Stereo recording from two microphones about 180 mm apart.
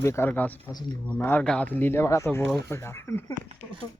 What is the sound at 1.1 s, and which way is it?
Speech, 10° left (ahead or behind).